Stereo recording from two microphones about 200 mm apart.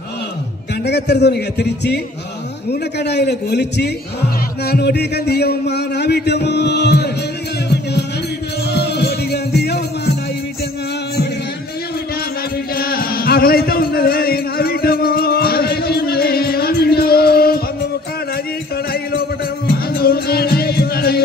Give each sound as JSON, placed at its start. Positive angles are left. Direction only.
{"t": 0.8, "sound": "a man's voice", "side_deg": 55}
{"t": 8.7, "sound": "music", "side_deg": 55}
{"t": 12.7, "sound": "music", "side_deg": 50}
{"t": 20.0, "sound": "music", "side_deg": 50}